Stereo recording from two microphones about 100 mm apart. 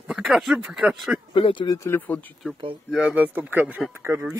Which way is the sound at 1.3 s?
60° left (ahead or behind).